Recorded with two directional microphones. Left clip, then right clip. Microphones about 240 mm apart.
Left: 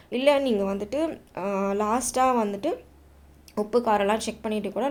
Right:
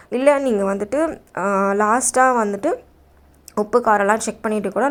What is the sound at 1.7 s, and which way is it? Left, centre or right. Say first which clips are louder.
A woman's voice: right 8 dB; right.